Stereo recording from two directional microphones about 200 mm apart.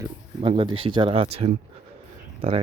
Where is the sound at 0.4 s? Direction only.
25° right (ahead or behind).